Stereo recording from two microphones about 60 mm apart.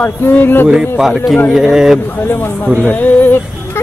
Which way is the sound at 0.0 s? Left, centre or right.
Left.